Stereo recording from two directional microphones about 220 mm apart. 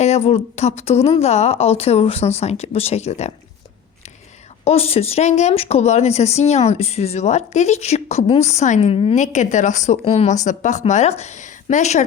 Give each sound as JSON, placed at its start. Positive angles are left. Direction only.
{"t": 0.0, "sound": "speech", "side_deg": 30}
{"t": 4.6, "sound": "speech", "side_deg": 25}